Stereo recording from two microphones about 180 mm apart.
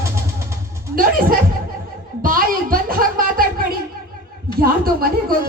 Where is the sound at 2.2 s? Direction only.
50° right (ahead or behind).